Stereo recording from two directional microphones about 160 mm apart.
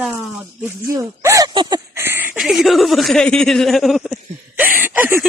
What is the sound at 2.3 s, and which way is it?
Speech, centre (ahead or behind).